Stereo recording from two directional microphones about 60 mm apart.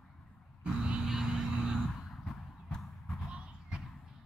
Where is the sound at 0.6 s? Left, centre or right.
Centre.